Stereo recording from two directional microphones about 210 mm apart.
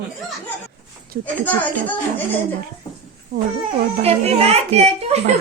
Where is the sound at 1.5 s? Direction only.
10° left (ahead or behind).